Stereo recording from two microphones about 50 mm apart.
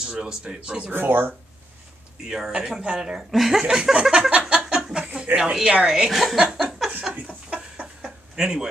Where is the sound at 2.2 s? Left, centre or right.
Centre.